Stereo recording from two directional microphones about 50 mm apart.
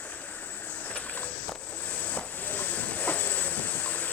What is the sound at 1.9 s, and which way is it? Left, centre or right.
Train, left.